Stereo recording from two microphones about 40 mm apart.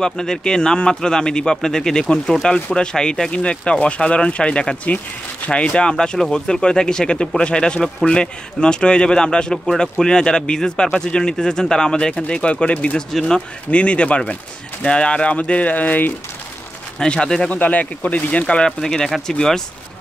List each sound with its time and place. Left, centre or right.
0.0 s speech: centre
9.7 s speech: centre; by 12.9 s left
13.1 s speech: centre
13.7 s speech: left
17.0 s speech: left
17.5 s speech: left
18.7 s speech: centre